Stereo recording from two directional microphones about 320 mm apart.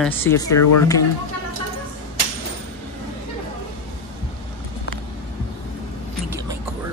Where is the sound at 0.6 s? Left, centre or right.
Left.